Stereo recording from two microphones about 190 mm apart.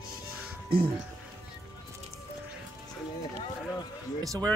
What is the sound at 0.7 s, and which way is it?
Speech, 55° right (ahead or behind).